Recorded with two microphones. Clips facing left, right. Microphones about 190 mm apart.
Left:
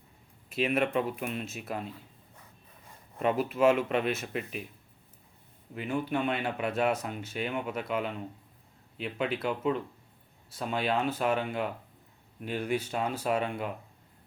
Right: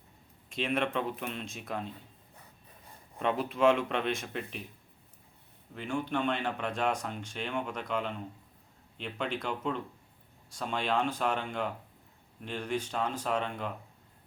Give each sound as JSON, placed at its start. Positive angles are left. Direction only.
{"t": 0.5, "sound": "speech", "side_deg": 5}
{"t": 3.2, "sound": "speech", "side_deg": 5}
{"t": 5.7, "sound": "speech", "side_deg": 5}